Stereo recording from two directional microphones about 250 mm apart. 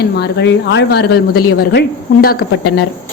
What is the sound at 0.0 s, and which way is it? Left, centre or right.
A woman's voice, left.